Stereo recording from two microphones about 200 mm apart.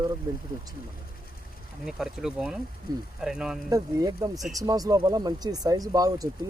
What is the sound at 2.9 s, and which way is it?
Speech, 20° right (ahead or behind).